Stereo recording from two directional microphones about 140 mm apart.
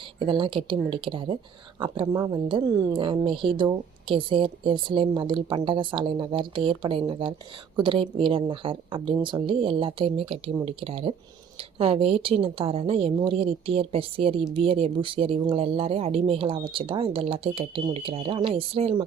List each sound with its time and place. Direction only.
0.2 s speech: 35° right (ahead or behind)
2.5 s a woman's voice: 35° right (ahead or behind)